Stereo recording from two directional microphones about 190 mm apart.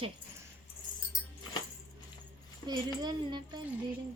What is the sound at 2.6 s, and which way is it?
Speech, 20° right (ahead or behind).